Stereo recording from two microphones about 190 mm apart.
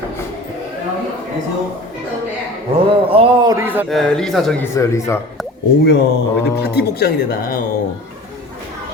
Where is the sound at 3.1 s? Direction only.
25° right (ahead or behind).